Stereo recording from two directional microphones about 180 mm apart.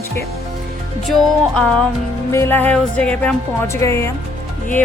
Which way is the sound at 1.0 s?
5° left (ahead or behind).